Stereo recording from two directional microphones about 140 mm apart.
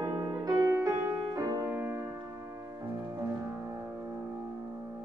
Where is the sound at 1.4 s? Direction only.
25° right (ahead or behind).